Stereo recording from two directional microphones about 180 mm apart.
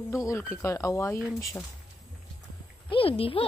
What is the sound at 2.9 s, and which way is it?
Speech, 30° left (ahead or behind).